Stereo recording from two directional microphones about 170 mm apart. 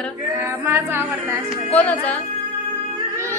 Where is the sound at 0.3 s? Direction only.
15° right (ahead or behind).